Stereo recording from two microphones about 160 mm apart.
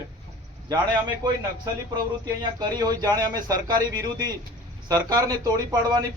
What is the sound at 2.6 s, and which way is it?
A man's voice, 25° right (ahead or behind).